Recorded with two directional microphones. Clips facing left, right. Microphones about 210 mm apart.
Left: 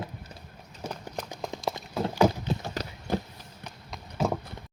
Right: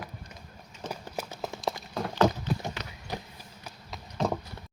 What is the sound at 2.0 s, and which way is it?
Clip-clop, 5° left (ahead or behind).